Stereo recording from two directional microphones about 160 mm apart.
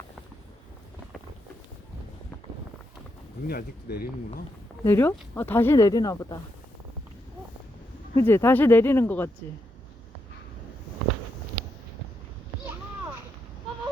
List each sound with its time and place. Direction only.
3.4 s speech: 75° left (ahead or behind)
4.8 s speech: 15° left (ahead or behind)
8.1 s speech: 15° left (ahead or behind)